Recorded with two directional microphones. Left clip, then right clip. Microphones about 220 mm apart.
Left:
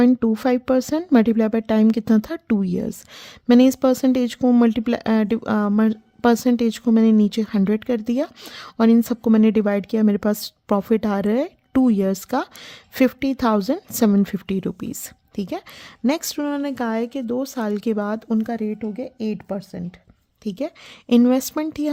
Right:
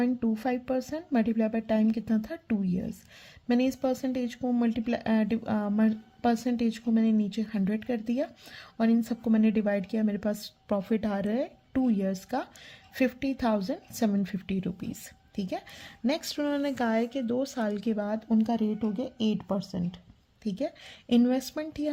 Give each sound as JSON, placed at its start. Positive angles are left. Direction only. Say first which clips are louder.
{"t": 0.0, "sound": "a woman's voice", "louder": "left 11 dB", "side_deg": 45}
{"t": 18.6, "sound": "a woman's voice", "louder": "left 4 dB", "side_deg": 30}
{"t": 20.4, "sound": "a woman's voice", "louder": "left 5 dB", "side_deg": 40}